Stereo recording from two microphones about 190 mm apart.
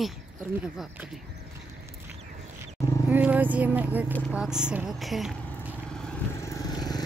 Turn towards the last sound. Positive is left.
turn(degrees=20)  # may be behind; listen again after turning